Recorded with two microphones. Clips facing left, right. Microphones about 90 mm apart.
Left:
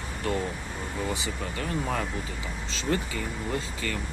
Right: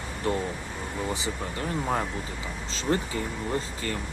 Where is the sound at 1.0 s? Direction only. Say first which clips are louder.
Right 2 dB; 30° right (ahead or behind).